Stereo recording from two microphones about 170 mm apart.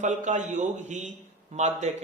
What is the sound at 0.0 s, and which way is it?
A man's voice, 45° right (ahead or behind).